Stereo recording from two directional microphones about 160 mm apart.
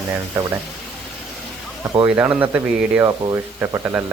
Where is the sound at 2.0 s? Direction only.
10° right (ahead or behind).